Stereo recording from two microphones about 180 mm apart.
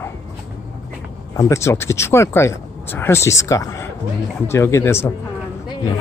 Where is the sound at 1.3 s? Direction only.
15° left (ahead or behind).